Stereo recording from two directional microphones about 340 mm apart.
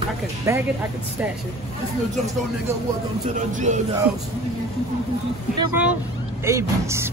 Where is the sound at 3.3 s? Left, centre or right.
Right.